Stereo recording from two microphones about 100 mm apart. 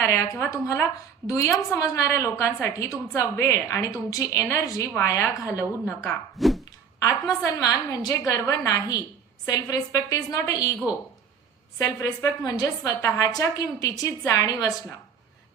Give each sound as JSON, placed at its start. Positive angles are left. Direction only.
{"t": 0.0, "sound": "a woman's voice", "side_deg": 30}
{"t": 6.3, "sound": "a sound", "side_deg": 0}
{"t": 6.7, "sound": "a woman's voice", "side_deg": 40}
{"t": 11.8, "sound": "a woman's voice", "side_deg": 35}